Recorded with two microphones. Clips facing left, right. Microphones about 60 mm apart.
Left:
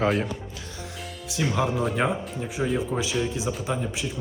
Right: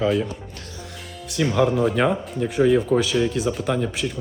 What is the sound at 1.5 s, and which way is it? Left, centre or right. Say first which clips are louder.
Speech: right 7 dB; centre.